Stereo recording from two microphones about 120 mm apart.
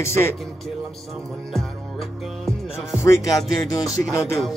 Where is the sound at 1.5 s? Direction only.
Centre (ahead or behind).